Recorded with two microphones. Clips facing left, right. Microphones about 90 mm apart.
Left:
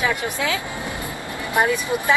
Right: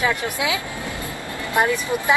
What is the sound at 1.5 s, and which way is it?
Speech, 15° left (ahead or behind).